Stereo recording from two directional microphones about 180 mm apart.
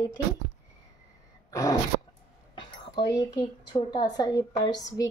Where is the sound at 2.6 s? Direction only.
25° left (ahead or behind).